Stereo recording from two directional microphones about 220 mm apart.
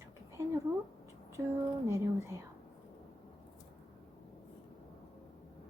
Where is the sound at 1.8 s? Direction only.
15° right (ahead or behind).